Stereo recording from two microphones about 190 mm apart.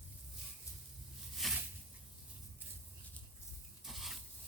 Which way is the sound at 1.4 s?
Centre (ahead or behind).